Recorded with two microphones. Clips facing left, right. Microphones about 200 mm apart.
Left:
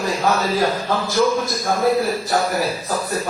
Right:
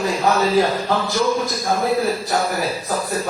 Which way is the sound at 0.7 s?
Centre (ahead or behind).